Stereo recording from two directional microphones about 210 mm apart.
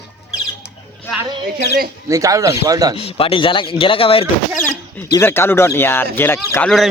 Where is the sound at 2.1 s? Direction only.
15° right (ahead or behind).